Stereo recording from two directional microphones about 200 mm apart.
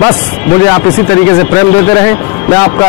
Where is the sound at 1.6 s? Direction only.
15° left (ahead or behind).